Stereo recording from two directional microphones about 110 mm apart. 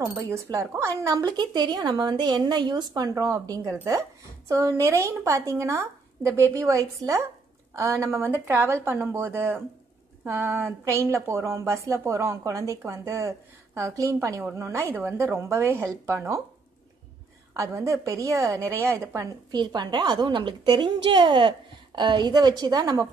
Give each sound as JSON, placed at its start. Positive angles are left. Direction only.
{"t": 0.1, "sound": "speech", "side_deg": -25}
{"t": 17.6, "sound": "speech", "side_deg": -30}
{"t": 19.5, "sound": "a woman's voice", "side_deg": -40}